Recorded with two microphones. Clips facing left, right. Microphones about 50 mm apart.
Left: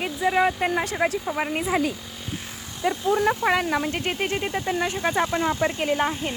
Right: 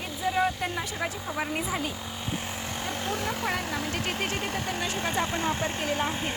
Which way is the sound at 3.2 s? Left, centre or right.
Left.